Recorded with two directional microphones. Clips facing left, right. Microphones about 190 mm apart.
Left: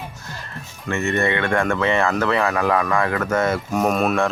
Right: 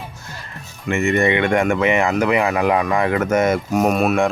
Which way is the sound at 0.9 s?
15° right (ahead or behind).